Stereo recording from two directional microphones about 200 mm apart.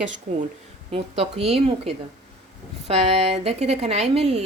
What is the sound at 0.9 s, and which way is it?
A woman's voice, 30° right (ahead or behind).